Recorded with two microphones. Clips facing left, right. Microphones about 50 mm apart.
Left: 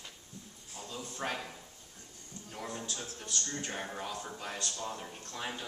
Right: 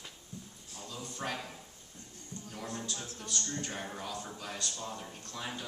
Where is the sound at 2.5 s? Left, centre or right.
Centre.